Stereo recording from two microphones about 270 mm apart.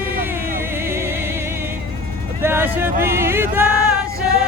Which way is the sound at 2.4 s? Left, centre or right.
Centre.